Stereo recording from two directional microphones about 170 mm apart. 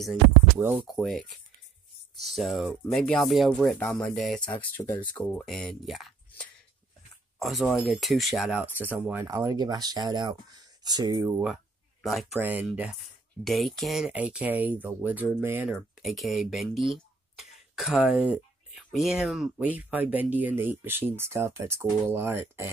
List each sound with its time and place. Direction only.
0.6 s speech: 10° right (ahead or behind)
0.8 s speech: centre (ahead or behind); by 11.4 s 20° right (ahead or behind)
11.4 s a sound: centre (ahead or behind)
12.4 s speech: 10° right (ahead or behind)
16.0 s speech: centre (ahead or behind)
16.9 s a sound: centre (ahead or behind)
18.9 s speech: centre (ahead or behind)